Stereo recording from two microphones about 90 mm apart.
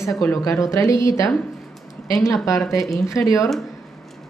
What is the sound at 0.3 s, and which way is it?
A woman's voice, 35° left (ahead or behind).